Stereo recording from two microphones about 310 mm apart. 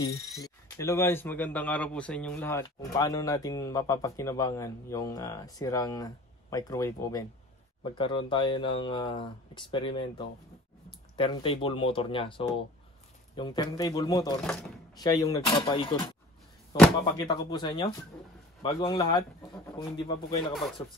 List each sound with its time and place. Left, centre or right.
0.4 s a man's voice: centre